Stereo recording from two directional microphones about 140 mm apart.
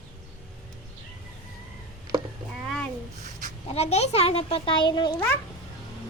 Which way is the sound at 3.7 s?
50° left (ahead or behind).